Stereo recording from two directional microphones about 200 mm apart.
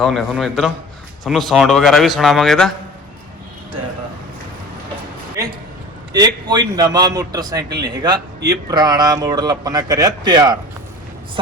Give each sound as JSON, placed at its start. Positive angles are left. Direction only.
{"t": 0.0, "sound": "speech", "side_deg": 0}
{"t": 6.1, "sound": "speech", "side_deg": -20}